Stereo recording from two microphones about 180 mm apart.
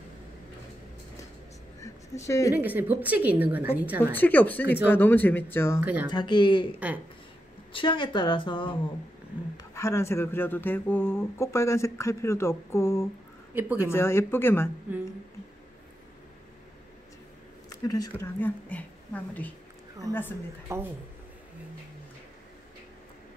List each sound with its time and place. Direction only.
1.8 s a sound: 15° left (ahead or behind)
2.5 s a woman's voice: 10° right (ahead or behind)
4.1 s speech: 10° left (ahead or behind)
5.8 s a woman's voice: 10° right (ahead or behind)
6.0 s speech: 25° left (ahead or behind)
7.7 s speech: 25° left (ahead or behind)
9.6 s speech: 15° left (ahead or behind)
13.6 s a woman's voice: 10° right (ahead or behind)
13.8 s speech: 15° left (ahead or behind)
17.6 s a woman's voice: 20° left (ahead or behind)
20.7 s a woman's voice: 15° right (ahead or behind)